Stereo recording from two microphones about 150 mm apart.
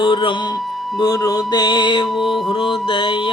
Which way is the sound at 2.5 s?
35° left (ahead or behind).